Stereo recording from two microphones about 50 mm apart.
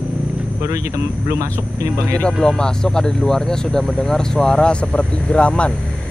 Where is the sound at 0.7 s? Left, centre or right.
Right.